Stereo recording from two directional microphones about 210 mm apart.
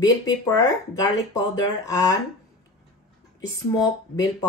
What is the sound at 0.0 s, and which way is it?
Speech, 15° left (ahead or behind).